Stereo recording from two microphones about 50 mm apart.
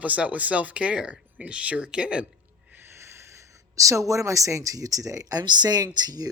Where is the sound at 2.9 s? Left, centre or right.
Right.